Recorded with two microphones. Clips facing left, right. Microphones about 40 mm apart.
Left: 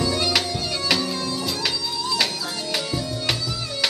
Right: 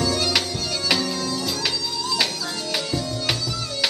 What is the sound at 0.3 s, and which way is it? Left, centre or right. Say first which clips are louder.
Music: left 1 dB; centre.